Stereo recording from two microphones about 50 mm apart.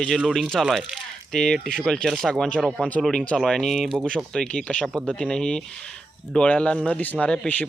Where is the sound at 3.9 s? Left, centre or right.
Centre.